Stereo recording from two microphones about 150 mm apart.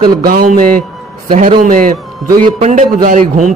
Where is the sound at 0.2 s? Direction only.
75° right (ahead or behind).